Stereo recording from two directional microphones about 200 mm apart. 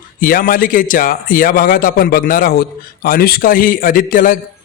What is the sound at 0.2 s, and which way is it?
A man's voice, 45° left (ahead or behind).